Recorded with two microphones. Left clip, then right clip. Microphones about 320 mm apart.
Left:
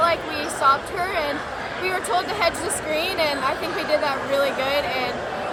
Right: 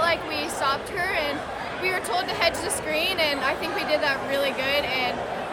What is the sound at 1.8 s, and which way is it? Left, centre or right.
A woman's voice, centre.